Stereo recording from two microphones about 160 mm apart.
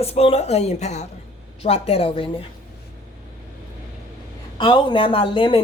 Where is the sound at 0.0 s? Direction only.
40° left (ahead or behind).